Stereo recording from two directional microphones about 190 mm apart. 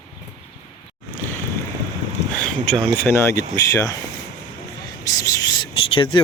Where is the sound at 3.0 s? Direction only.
15° left (ahead or behind).